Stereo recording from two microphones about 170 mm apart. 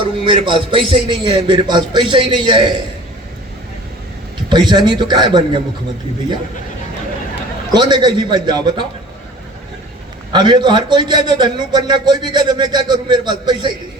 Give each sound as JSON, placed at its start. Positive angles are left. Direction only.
{"t": 0.3, "sound": "a man's voice", "side_deg": -30}
{"t": 4.4, "sound": "a man's voice", "side_deg": -25}
{"t": 7.7, "sound": "a man's voice", "side_deg": -25}
{"t": 10.3, "sound": "a man's voice", "side_deg": -25}